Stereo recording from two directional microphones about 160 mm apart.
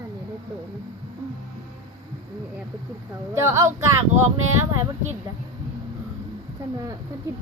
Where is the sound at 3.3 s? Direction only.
15° right (ahead or behind).